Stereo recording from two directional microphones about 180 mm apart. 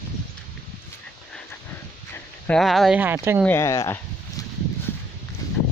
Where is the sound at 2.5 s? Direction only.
Centre (ahead or behind).